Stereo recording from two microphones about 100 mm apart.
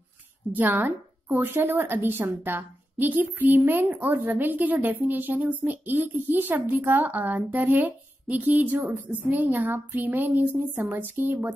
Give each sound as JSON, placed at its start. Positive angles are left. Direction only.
{"t": 0.5, "sound": "a woman's voice", "side_deg": -20}